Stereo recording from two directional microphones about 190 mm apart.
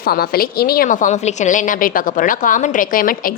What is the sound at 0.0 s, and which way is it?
A woman's voice, 50° left (ahead or behind).